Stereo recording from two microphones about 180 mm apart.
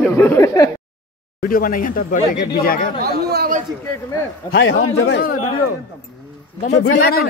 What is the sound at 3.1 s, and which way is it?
Speech, 60° right (ahead or behind).